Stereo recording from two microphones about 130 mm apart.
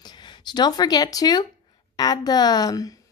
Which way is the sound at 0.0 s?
35° left (ahead or behind).